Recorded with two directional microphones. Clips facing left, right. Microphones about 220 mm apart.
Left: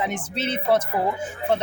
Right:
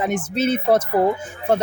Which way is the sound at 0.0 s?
45° right (ahead or behind).